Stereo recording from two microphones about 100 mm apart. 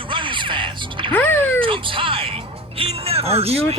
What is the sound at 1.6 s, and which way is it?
Speech, 60° right (ahead or behind).